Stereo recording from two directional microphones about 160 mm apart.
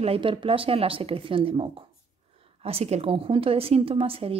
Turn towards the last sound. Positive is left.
turn(degrees=-35)  # may be behind; listen again after turning